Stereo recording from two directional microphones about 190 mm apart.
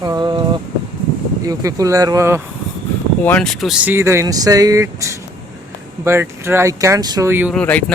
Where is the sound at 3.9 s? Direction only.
15° right (ahead or behind).